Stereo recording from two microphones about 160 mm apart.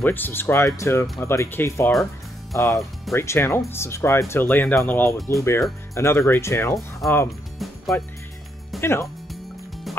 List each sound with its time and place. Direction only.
0.0 s speech: 10° left (ahead or behind)
7.0 s speech: centre (ahead or behind)
7.5 s music: centre (ahead or behind)
8.8 s speech: 15° left (ahead or behind)